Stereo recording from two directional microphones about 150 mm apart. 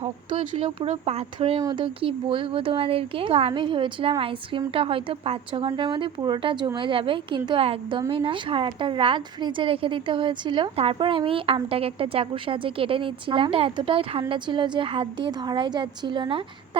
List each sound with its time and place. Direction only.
0.0 s a woman's voice: 40° right (ahead or behind)